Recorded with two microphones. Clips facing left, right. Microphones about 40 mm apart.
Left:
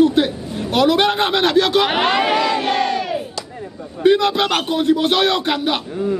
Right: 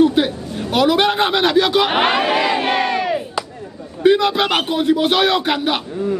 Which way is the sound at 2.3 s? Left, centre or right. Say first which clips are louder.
Right 1 dB; centre.